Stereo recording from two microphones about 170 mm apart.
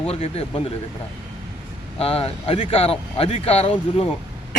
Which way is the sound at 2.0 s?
35° left (ahead or behind).